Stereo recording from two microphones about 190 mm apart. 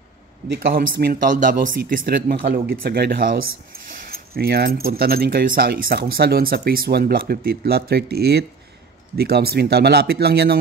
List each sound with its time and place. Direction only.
0.5 s speech: 50° right (ahead or behind)